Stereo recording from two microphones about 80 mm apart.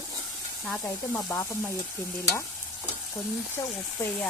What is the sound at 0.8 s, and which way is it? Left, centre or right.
Speech, left.